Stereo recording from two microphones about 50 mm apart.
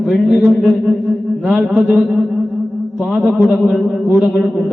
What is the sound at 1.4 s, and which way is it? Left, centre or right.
Mantra, right.